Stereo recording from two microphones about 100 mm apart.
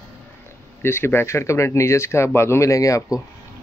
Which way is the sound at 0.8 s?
25° left (ahead or behind).